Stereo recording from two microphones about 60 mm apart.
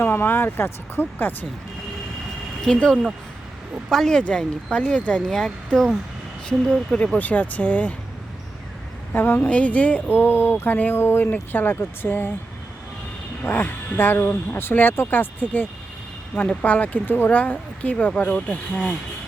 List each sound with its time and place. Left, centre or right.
0.0 s speech: left
2.6 s speech: centre
5.3 s speech: centre
6.9 s speech: centre
9.1 s speech: left
13.4 s speech: left
16.6 s speech: left